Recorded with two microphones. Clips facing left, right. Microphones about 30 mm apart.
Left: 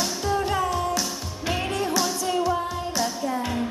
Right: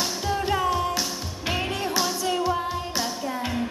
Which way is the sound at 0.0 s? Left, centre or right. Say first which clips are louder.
Left 1 dB; centre.